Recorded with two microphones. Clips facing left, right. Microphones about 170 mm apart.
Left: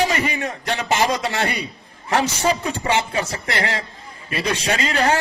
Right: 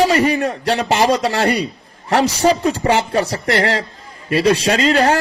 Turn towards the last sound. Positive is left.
turn(degrees=-35)  # may be behind; listen again after turning